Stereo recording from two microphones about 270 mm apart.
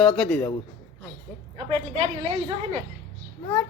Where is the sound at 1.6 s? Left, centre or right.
Right.